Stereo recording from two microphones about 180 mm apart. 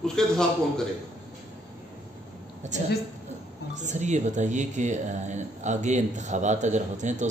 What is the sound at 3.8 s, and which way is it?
Speech, 40° right (ahead or behind).